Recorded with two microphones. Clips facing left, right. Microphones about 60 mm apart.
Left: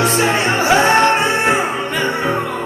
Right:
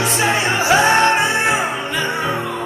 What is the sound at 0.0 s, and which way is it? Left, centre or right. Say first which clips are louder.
Music: left 2 dB; left.